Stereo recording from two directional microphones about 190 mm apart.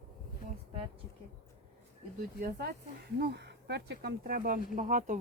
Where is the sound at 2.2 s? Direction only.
55° right (ahead or behind).